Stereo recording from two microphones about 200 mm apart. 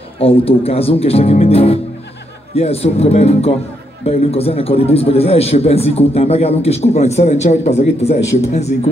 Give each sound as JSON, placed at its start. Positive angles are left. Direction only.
{"t": 0.2, "sound": "a man's voice", "side_deg": 30}